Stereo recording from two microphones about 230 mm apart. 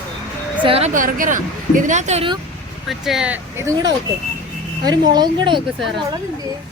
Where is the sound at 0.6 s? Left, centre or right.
Right.